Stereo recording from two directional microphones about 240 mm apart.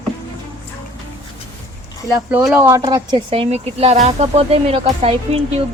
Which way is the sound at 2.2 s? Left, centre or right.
Centre.